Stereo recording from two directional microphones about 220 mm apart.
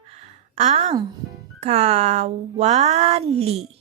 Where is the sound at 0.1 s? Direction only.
30° right (ahead or behind).